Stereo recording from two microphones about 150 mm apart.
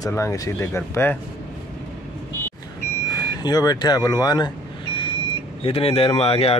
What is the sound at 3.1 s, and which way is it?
Vehicle, 25° left (ahead or behind).